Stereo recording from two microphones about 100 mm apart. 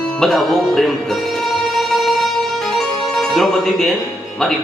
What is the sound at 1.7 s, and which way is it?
Music, centre (ahead or behind).